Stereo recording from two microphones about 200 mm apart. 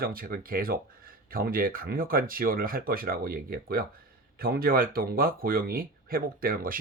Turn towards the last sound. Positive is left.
turn(degrees=-45)  # may be behind; listen again after turning